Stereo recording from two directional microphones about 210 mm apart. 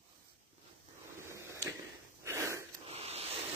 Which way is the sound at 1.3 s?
15° right (ahead or behind).